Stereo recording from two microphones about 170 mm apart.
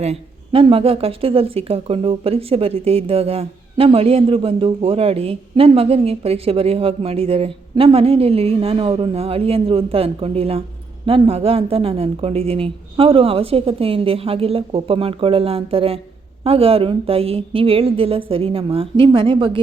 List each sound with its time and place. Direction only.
0.0 s speech: 35° right (ahead or behind)